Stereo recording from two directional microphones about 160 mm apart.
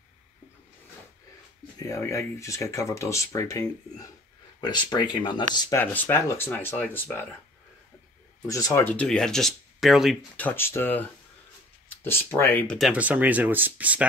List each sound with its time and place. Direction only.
1.8 s speech: 20° left (ahead or behind)
5.8 s speech: 15° left (ahead or behind)
8.5 s speech: 20° left (ahead or behind)
8.9 s speech: 5° left (ahead or behind)
10.4 s speech: 15° left (ahead or behind)
12.7 s speech: 5° right (ahead or behind)